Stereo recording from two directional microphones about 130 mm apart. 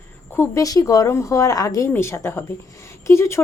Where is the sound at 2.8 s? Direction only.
20° left (ahead or behind).